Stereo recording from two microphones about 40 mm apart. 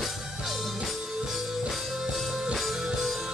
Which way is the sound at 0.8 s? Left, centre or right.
Centre.